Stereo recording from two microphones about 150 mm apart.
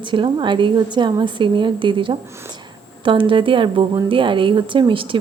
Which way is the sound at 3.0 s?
35° right (ahead or behind).